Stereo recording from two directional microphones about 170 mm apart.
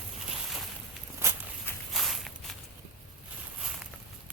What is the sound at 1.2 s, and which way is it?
Walk, 15° right (ahead or behind).